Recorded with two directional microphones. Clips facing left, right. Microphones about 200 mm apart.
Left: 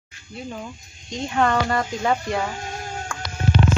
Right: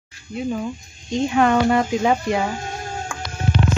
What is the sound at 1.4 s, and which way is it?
Speech, 15° right (ahead or behind).